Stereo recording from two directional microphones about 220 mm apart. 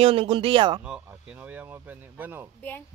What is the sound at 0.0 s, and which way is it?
Speech, 25° right (ahead or behind).